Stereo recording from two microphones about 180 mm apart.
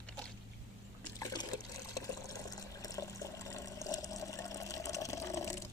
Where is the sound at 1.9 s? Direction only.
20° left (ahead or behind).